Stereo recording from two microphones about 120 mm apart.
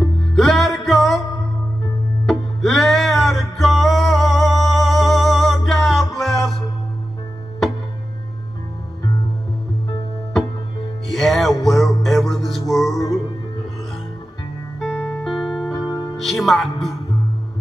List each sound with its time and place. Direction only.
0.0 s music: centre (ahead or behind)
2.2 s music: centre (ahead or behind)
11.1 s music: 5° left (ahead or behind)
14.8 s music: 10° left (ahead or behind)